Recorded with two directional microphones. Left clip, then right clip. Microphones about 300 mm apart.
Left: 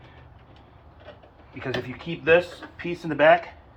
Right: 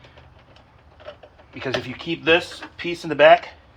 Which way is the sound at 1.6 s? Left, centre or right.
Right.